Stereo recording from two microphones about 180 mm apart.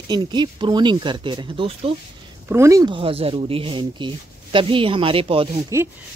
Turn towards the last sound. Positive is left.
turn(degrees=-15)  # may be behind; listen again after turning